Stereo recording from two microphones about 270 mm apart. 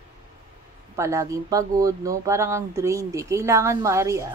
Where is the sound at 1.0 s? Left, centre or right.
Centre.